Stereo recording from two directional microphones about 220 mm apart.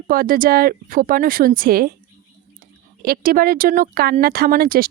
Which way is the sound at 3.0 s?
40° right (ahead or behind).